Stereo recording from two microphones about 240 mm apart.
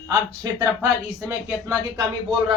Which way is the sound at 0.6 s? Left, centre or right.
Centre.